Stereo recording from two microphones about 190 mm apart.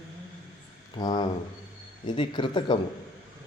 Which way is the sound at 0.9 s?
20° left (ahead or behind).